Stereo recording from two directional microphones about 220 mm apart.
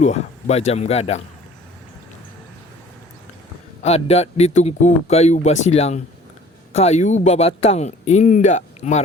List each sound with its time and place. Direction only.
0.0 s speech: 30° left (ahead or behind)
3.8 s speech: 30° left (ahead or behind)